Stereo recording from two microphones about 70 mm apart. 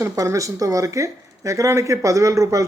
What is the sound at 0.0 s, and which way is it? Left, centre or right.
Speech, right.